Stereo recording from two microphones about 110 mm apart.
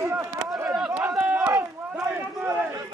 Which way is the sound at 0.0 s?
25° right (ahead or behind).